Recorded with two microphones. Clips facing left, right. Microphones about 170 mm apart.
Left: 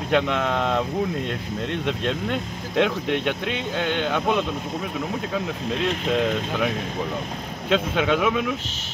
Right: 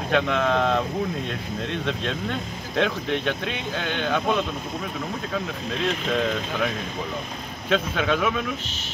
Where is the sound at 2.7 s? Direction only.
15° left (ahead or behind).